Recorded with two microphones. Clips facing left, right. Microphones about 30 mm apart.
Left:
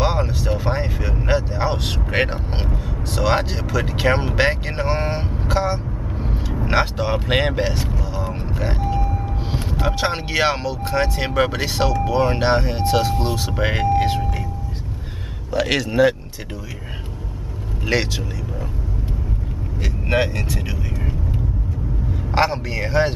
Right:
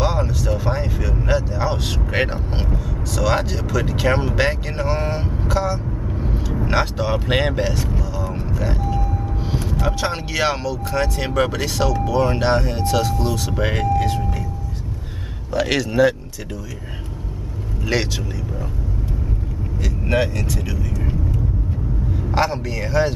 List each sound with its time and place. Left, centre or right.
0.0 s vehicle: left
3.1 s speech: left
6.1 s vehicle: centre
6.5 s speech: centre
13.1 s speech: left
13.5 s speech: centre
13.8 s speech: left
15.5 s speech: centre
17.8 s speech: centre
19.8 s speech: left
22.3 s speech: left